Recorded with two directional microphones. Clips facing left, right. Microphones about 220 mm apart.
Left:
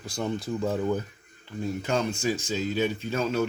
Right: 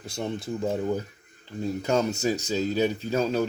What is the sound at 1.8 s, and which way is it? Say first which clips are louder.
Speech: right 4 dB; 40° right (ahead or behind).